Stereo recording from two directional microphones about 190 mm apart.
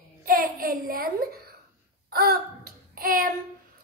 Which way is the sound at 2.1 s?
55° right (ahead or behind).